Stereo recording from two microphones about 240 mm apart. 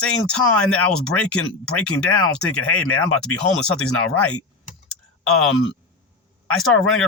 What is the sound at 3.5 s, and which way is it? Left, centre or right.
Speech, centre.